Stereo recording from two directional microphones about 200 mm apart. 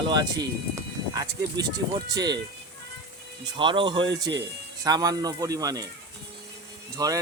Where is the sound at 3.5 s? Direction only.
25° right (ahead or behind).